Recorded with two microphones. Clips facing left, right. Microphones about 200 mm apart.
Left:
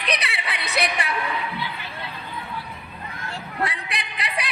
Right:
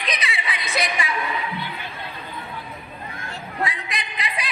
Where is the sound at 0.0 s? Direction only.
65° left (ahead or behind).